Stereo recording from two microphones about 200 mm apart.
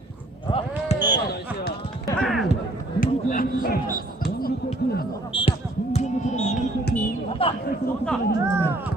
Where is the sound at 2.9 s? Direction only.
45° left (ahead or behind).